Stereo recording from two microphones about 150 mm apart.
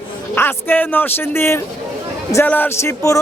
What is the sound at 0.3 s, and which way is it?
Speech, 15° left (ahead or behind).